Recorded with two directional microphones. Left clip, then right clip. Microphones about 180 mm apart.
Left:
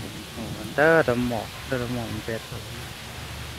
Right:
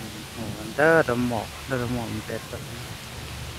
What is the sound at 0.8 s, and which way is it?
Speech, 10° right (ahead or behind).